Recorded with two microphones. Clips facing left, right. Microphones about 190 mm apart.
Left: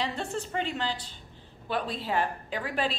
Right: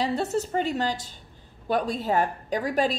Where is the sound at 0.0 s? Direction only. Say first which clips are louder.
Right 7 dB; 40° right (ahead or behind).